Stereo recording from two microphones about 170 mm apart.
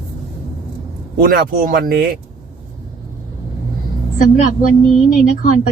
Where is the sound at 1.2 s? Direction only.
55° right (ahead or behind).